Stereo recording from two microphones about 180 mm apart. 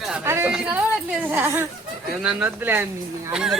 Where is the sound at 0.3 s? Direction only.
15° right (ahead or behind).